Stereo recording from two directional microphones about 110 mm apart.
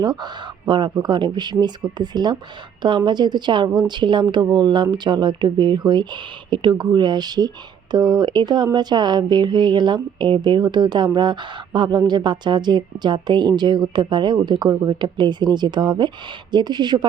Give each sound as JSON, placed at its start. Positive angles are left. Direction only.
{"t": 0.0, "sound": "a woman's voice", "side_deg": -40}